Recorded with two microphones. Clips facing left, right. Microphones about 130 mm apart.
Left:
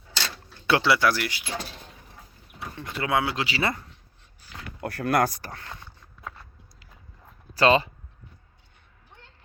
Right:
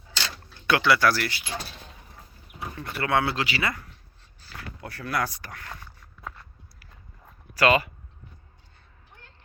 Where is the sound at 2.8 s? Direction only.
15° left (ahead or behind).